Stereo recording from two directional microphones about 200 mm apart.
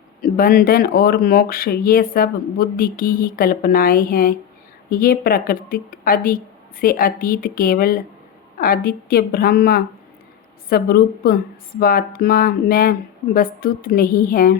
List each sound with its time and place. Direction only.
0.2 s speech: 45° left (ahead or behind)